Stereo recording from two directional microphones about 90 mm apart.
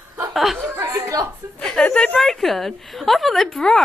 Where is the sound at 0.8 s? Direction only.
30° right (ahead or behind).